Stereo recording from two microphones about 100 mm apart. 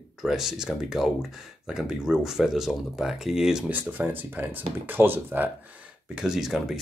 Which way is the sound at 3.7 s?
20° right (ahead or behind).